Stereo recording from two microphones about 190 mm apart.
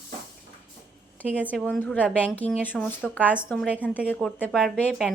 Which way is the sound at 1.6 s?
10° left (ahead or behind).